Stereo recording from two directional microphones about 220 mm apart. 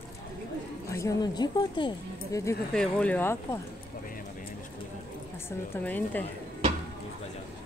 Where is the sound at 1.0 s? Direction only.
15° left (ahead or behind).